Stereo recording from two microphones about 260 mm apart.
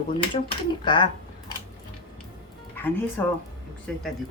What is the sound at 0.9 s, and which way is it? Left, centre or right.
Speech, centre.